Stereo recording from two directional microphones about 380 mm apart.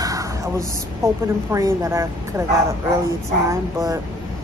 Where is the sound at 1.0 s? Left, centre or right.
Centre.